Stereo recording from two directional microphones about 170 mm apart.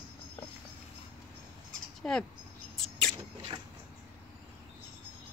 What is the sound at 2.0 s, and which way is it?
Bird, 5° left (ahead or behind).